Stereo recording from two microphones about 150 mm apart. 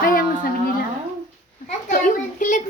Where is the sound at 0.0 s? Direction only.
70° left (ahead or behind).